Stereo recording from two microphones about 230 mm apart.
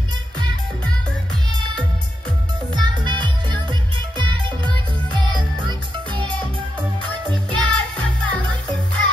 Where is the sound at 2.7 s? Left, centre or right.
Centre.